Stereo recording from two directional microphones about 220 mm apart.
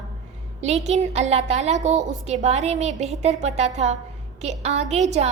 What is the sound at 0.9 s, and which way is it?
A woman's voice, 30° right (ahead or behind).